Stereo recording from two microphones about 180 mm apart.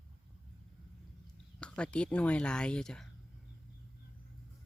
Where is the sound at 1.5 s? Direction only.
5° left (ahead or behind).